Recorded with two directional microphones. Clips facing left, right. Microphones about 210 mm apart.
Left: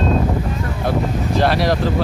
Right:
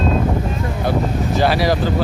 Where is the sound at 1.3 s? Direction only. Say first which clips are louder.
Even; centre (ahead or behind).